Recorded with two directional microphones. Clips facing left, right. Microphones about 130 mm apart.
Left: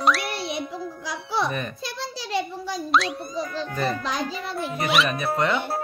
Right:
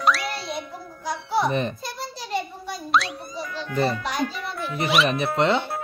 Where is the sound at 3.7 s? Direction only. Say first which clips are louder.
Right 5 dB; 30° right (ahead or behind).